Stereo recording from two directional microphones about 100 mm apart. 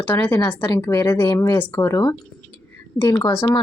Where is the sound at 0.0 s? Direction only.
20° left (ahead or behind).